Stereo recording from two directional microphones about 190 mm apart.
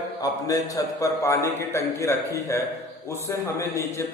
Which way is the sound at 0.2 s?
20° left (ahead or behind).